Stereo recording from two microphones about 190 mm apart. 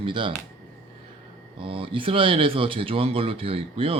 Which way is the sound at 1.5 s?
30° right (ahead or behind).